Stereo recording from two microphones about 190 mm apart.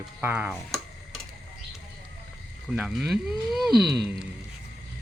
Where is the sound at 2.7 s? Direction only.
5° right (ahead or behind).